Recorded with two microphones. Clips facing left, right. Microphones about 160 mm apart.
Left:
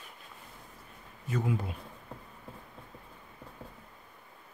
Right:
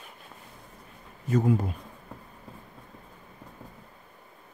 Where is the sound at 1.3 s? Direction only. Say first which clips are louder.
Right 8 dB; 45° right (ahead or behind).